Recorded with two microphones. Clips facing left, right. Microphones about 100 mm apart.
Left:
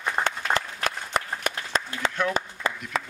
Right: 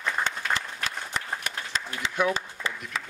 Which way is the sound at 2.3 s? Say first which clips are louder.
Left 5 dB; 50° left (ahead or behind).